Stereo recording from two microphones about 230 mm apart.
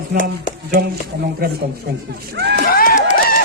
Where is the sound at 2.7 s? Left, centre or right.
Left.